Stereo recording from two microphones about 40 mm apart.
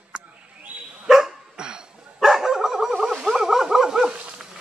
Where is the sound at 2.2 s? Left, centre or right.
Centre.